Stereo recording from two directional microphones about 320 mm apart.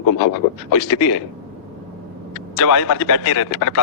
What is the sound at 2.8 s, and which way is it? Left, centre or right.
Speech, left.